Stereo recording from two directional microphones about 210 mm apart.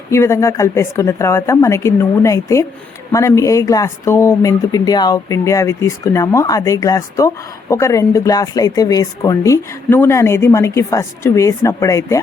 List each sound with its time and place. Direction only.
0.1 s speech: 15° left (ahead or behind)